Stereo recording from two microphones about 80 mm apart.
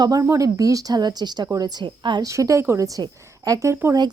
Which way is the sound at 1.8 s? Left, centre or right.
Right.